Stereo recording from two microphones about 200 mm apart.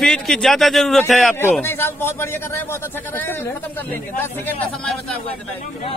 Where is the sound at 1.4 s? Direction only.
10° left (ahead or behind).